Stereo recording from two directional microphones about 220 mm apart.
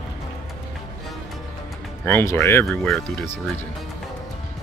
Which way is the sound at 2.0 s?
10° left (ahead or behind).